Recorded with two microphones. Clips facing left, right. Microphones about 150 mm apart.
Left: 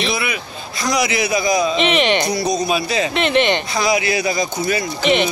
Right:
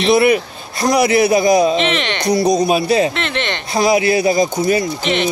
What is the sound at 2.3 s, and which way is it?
Speech, 55° right (ahead or behind).